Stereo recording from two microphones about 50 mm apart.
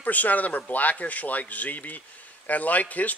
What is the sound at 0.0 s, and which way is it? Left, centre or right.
Speech, left.